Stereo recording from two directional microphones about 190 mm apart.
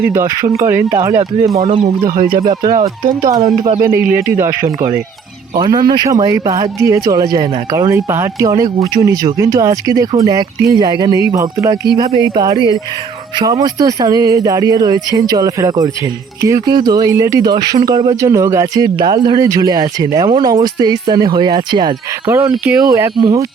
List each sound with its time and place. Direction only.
0.1 s speech: 15° right (ahead or behind)
1.6 s speech: 35° right (ahead or behind)
2.0 s speech: 50° right (ahead or behind)
2.7 s speech: 35° right (ahead or behind)
3.2 s speech: 20° right (ahead or behind)
11.9 s speech: 25° right (ahead or behind)
12.5 s speech: 20° left (ahead or behind)
13.4 s speech: 20° right (ahead or behind)